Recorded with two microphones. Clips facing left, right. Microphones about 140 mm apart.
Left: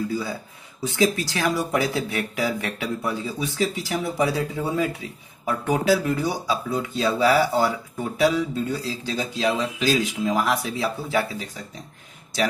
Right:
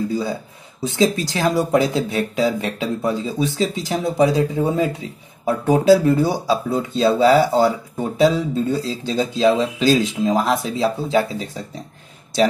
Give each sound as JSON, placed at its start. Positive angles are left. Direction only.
{"t": 0.1, "sound": "speech", "side_deg": -25}